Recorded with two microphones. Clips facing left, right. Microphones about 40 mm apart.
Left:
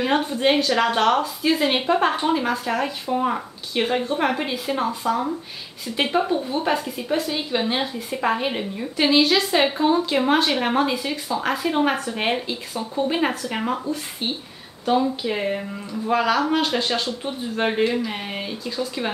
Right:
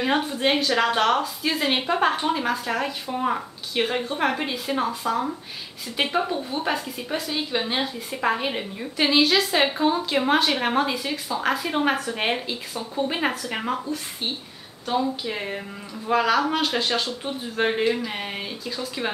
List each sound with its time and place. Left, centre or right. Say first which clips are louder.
0.0 s speech: left 2 dB; centre